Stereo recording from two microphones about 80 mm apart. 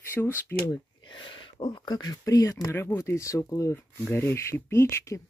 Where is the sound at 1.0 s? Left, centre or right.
Left.